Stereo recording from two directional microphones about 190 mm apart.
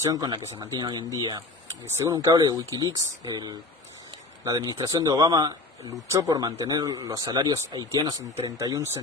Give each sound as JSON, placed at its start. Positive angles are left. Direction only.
{"t": 0.0, "sound": "speech", "side_deg": -20}